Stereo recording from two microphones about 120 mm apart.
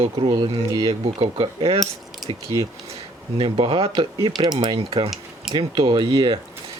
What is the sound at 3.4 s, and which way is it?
Speech, 50° right (ahead or behind).